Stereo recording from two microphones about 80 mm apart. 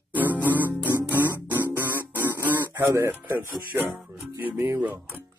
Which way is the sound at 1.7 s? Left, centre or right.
Right.